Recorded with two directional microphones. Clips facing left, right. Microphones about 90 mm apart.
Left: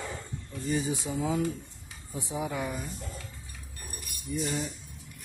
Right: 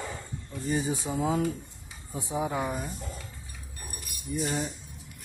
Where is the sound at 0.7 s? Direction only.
35° right (ahead or behind).